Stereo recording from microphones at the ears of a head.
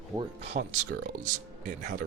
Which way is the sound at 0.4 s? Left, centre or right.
Right.